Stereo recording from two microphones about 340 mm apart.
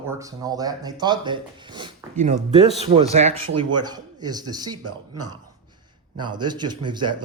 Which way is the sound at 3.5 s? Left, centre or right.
Right.